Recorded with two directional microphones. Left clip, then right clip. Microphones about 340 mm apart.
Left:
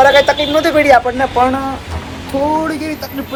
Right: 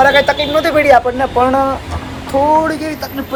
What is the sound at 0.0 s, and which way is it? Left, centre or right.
A man's voice, centre.